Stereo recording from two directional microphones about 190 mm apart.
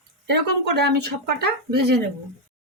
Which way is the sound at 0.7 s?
60° right (ahead or behind).